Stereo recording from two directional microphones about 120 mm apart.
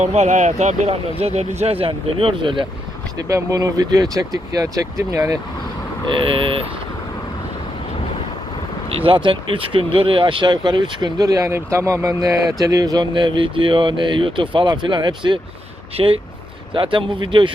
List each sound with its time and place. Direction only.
0.0 s speech: 70° right (ahead or behind); by 2.6 s 45° right (ahead or behind)
3.2 s speech: 30° right (ahead or behind)
6.2 s speech: 45° right (ahead or behind)
9.0 s speech: 45° right (ahead or behind)